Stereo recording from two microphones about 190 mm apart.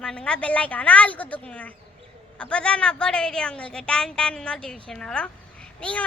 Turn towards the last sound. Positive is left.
turn(degrees=5)  # may be behind; listen again after turning